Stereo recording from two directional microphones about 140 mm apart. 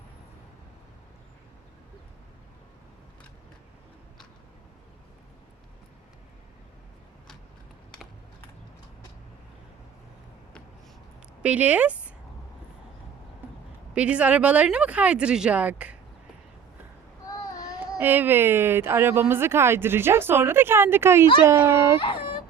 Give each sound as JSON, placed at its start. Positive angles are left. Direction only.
{"t": 11.4, "sound": "speech", "side_deg": -10}
{"t": 13.9, "sound": "speech", "side_deg": -10}
{"t": 17.2, "sound": "child singing", "side_deg": 25}
{"t": 18.0, "sound": "speech", "side_deg": -15}